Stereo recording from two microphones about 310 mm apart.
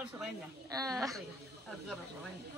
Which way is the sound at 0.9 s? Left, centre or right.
Centre.